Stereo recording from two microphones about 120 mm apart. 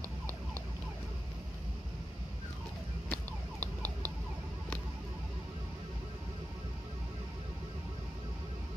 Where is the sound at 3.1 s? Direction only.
15° left (ahead or behind).